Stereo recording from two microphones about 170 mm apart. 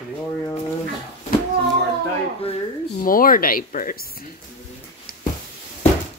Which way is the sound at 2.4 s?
35° left (ahead or behind).